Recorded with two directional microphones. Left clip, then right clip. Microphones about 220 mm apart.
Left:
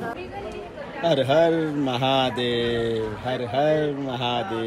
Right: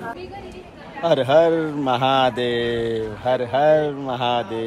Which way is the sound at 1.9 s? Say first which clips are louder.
Right 5 dB; 25° right (ahead or behind).